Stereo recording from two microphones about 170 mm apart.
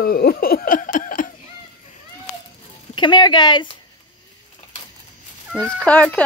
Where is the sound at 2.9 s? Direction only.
30° left (ahead or behind).